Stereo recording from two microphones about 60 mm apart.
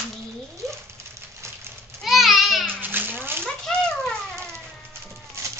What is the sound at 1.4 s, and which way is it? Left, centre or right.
Goat, right.